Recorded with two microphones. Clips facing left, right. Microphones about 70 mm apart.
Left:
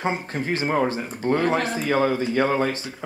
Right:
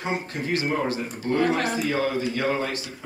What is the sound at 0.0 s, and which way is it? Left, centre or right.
Speech, left.